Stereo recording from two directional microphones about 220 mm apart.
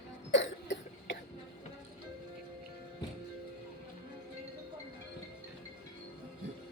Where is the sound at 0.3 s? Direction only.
55° left (ahead or behind).